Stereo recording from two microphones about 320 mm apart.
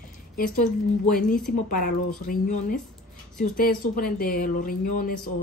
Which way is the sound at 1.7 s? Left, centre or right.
Left.